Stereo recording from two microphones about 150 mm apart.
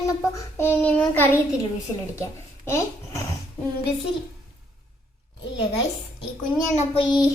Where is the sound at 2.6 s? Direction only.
20° left (ahead or behind).